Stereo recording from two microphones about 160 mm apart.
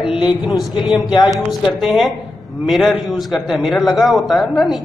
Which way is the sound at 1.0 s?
25° left (ahead or behind).